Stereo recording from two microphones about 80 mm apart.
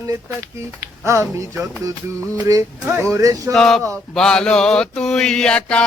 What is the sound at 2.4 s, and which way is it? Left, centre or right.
Speech, right.